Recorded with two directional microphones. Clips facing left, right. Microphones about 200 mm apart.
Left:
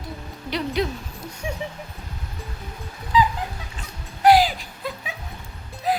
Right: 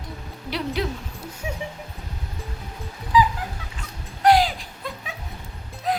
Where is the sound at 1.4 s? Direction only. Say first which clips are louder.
Left 2 dB; 5° right (ahead or behind).